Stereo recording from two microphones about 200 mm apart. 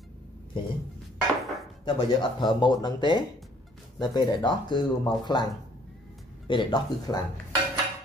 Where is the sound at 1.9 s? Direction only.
20° left (ahead or behind).